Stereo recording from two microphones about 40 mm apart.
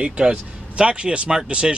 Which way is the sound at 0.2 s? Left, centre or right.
Right.